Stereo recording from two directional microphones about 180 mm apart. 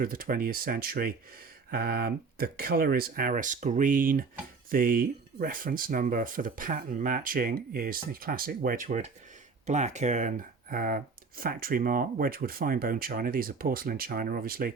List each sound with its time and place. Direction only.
0.0 s speech: 50° right (ahead or behind)